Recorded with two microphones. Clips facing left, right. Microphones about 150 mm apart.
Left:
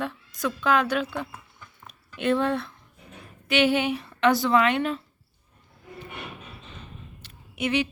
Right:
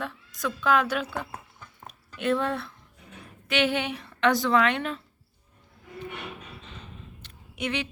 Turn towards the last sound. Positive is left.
turn(degrees=5)  # may be behind; listen again after turning